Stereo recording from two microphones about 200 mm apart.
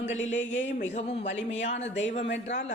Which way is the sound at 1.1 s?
65° left (ahead or behind).